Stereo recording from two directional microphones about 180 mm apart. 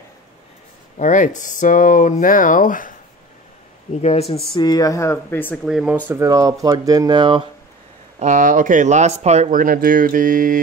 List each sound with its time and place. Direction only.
0.9 s speech: 45° left (ahead or behind)
3.9 s speech: 35° left (ahead or behind)
4.6 s speech: 20° left (ahead or behind)
5.7 s speech: 5° right (ahead or behind)
6.0 s speech: 15° right (ahead or behind)
8.2 s speech: 45° right (ahead or behind)